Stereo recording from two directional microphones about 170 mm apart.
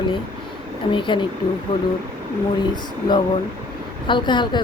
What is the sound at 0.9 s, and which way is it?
Speech, 30° left (ahead or behind).